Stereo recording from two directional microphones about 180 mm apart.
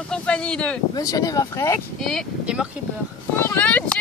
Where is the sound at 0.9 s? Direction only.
20° left (ahead or behind).